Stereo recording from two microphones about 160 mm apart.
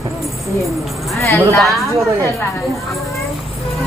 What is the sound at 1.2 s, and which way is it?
Speech, 15° left (ahead or behind).